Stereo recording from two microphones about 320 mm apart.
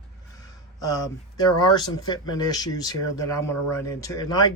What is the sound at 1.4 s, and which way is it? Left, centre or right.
Speech, centre.